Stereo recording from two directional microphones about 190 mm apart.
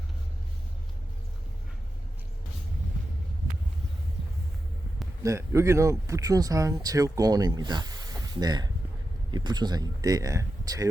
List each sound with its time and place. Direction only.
5.2 s speech: 15° right (ahead or behind)